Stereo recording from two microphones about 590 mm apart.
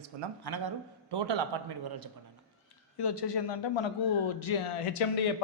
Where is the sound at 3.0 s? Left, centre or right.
Left.